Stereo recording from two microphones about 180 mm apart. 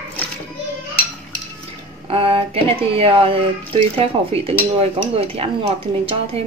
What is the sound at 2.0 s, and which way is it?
Speech, 35° right (ahead or behind).